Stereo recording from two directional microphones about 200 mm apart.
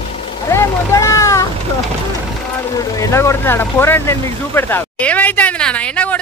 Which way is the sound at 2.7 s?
20° left (ahead or behind).